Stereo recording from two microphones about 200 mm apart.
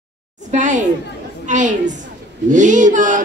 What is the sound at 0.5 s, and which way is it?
A woman's voice, 35° right (ahead or behind).